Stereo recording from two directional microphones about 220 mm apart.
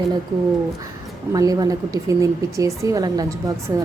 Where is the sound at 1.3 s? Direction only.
15° right (ahead or behind).